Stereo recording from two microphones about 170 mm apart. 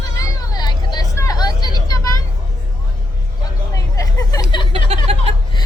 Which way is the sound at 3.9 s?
20° left (ahead or behind).